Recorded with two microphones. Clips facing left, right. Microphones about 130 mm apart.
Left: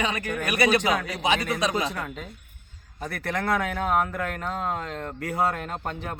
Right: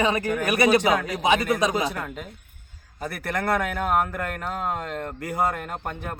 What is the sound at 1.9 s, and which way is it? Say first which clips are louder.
Speech: right 1 dB; 5° right (ahead or behind).